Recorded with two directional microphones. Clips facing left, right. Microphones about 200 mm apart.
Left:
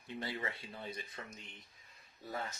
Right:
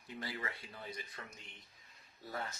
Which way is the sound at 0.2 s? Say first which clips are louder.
Left 2 dB; 25° left (ahead or behind).